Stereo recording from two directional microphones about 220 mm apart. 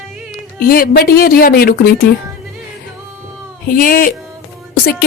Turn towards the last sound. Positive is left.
turn(degrees=45)  # may be behind; listen again after turning